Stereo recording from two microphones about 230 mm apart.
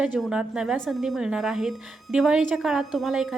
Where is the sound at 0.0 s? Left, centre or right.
Centre.